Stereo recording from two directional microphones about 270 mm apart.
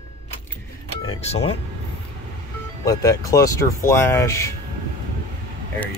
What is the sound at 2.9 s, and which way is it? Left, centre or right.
Speech, centre.